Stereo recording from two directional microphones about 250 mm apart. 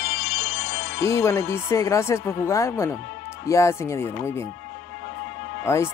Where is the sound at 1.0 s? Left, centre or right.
Centre.